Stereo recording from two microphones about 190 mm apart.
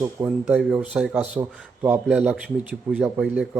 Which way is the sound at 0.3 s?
5° right (ahead or behind).